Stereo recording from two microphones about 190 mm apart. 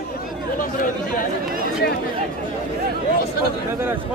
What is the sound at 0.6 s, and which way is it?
Chatter, 45° left (ahead or behind).